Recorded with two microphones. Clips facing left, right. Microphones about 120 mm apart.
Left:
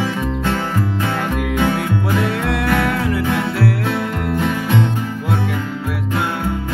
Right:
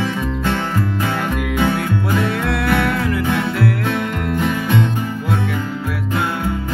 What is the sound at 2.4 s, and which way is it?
Music, 40° left (ahead or behind).